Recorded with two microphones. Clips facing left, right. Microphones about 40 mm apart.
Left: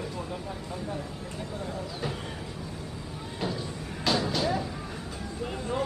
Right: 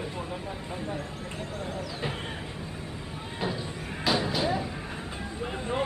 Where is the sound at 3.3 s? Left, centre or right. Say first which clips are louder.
Right 1 dB; centre.